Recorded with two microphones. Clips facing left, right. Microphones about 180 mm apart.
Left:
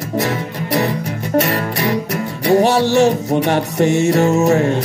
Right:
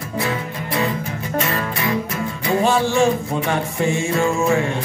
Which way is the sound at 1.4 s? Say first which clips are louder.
Left 6 dB; 70° left (ahead or behind).